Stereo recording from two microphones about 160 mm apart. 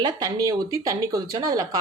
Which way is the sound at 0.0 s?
20° right (ahead or behind).